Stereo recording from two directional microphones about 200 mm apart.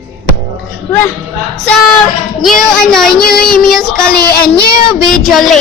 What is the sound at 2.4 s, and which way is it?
Speech, centre (ahead or behind).